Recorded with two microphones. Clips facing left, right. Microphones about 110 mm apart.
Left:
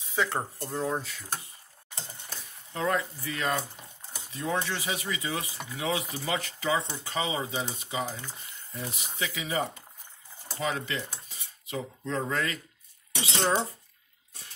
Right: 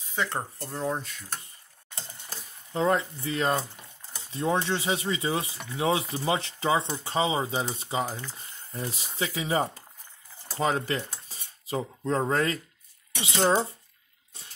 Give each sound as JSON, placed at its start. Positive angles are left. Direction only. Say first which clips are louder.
{"t": 0.1, "sound": "speech", "louder": "left 1 dB", "side_deg": 0}
{"t": 2.2, "sound": "speech", "louder": "right 1 dB", "side_deg": -30}
{"t": 10.6, "sound": "cutlery", "louder": "right 5 dB", "side_deg": -40}